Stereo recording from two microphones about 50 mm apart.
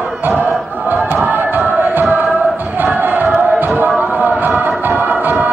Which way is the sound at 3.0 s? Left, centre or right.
Right.